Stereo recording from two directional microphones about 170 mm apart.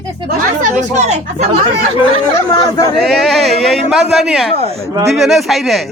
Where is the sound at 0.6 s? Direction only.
45° right (ahead or behind).